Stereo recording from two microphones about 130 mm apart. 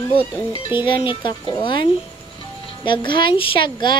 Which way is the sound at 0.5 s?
40° left (ahead or behind).